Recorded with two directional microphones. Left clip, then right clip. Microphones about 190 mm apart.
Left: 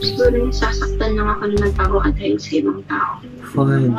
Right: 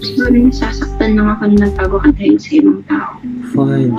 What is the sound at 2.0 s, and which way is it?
Speech, 45° right (ahead or behind).